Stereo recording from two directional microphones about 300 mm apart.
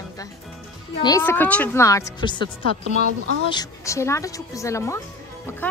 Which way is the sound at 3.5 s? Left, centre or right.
Centre.